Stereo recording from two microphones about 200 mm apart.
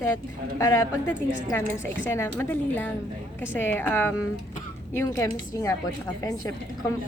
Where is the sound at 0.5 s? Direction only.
15° left (ahead or behind).